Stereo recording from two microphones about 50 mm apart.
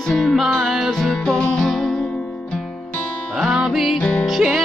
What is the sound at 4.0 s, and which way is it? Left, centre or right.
Music, left.